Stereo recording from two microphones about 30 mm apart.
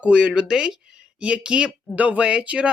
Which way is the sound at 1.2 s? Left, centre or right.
Right.